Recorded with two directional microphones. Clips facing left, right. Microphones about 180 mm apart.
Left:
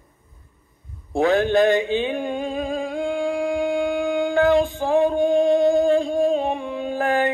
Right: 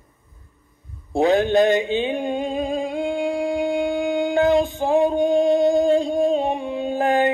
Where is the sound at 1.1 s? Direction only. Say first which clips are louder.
Right 1 dB; 20° right (ahead or behind).